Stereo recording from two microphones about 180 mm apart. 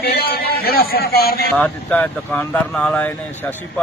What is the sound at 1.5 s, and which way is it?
Speech, 5° left (ahead or behind).